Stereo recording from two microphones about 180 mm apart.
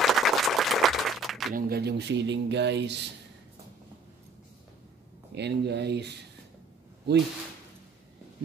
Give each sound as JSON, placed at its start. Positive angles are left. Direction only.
{"t": 0.0, "sound": "a sound", "side_deg": 0}
{"t": 1.5, "sound": "speech", "side_deg": -60}
{"t": 5.3, "sound": "speech", "side_deg": -70}